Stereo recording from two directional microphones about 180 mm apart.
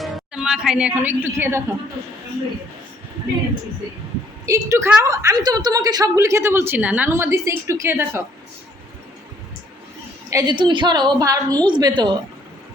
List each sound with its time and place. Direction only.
0.0 s a woman's voice: 5° right (ahead or behind)
4.4 s a woman's voice: 15° right (ahead or behind)
10.2 s a woman's voice: 20° right (ahead or behind)